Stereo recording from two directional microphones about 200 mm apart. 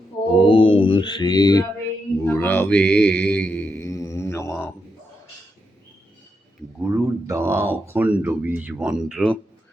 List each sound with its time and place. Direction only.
0.3 s music: 25° left (ahead or behind)
2.2 s mantra: 10° left (ahead or behind)
6.8 s speech: 10° right (ahead or behind)